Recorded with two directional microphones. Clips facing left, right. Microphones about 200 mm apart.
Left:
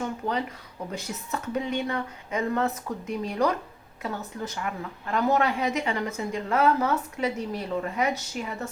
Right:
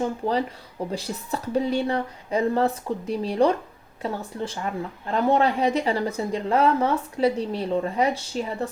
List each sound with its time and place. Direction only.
0.0 s speech: 30° right (ahead or behind)